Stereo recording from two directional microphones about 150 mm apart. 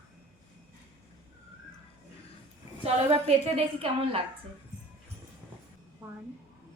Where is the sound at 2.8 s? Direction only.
40° right (ahead or behind).